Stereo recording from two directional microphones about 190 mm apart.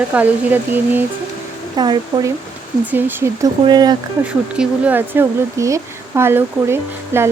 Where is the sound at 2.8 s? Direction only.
10° right (ahead or behind).